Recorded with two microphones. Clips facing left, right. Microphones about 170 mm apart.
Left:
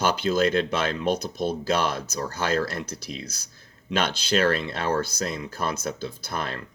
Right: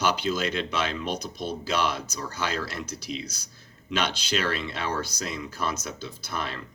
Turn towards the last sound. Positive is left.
turn(degrees=50)  # may be behind; listen again after turning